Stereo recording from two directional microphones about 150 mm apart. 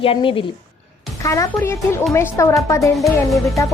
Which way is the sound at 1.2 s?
20° left (ahead or behind).